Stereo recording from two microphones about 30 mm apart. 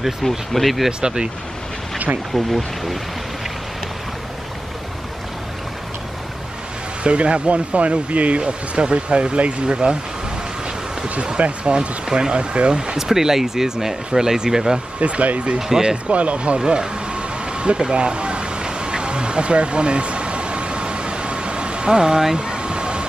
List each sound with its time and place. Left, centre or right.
0.5 s speech: centre
1.0 s speech: right
2.3 s speech: centre
7.0 s speech: right
8.4 s speech: right
11.3 s speech: right
12.1 s speech: right
12.9 s speech: centre
15.0 s speech: right
16.5 s vehicle: right
17.9 s a sound: right
22.4 s air conditioning: right